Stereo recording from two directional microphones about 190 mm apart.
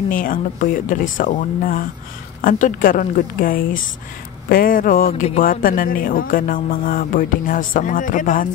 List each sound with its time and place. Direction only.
0.1 s speech: 45° left (ahead or behind)